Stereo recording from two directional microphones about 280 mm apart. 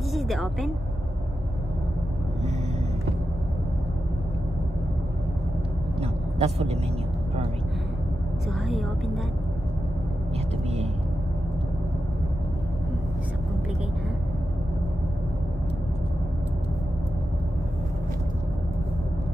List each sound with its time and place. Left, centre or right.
0.1 s a woman's voice: centre
5.9 s a sound: right
8.5 s a woman's voice: centre